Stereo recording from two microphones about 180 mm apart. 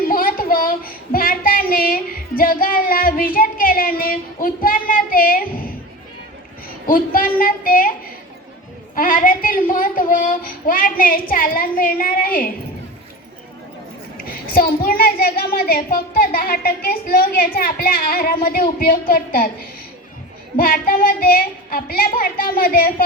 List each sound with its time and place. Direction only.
0.0 s child singing: 50° left (ahead or behind)
6.8 s a child's voice: 50° left (ahead or behind)
9.0 s a child's voice: 50° left (ahead or behind)
14.2 s a child's voice: 55° left (ahead or behind)
20.6 s a child's voice: 50° left (ahead or behind)